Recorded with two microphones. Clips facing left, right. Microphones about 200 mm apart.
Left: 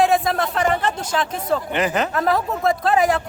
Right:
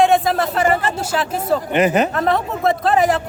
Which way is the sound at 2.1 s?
Centre (ahead or behind).